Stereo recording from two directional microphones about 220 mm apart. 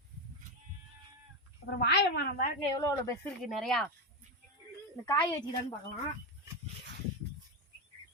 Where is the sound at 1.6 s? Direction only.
50° left (ahead or behind).